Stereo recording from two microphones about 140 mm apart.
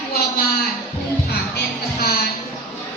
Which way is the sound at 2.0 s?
90° left.